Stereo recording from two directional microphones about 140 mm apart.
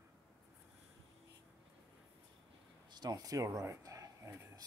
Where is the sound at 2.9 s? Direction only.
30° right (ahead or behind).